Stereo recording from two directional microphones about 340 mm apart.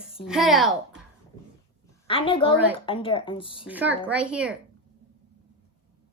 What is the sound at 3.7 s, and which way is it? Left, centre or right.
Speech, centre.